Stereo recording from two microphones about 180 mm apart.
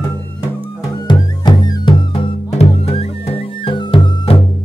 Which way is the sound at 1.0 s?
25° left (ahead or behind).